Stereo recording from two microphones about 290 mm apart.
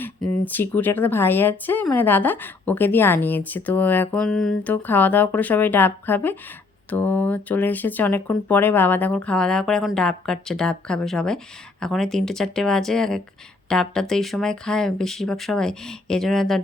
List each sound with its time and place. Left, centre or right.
0.0 s speech: centre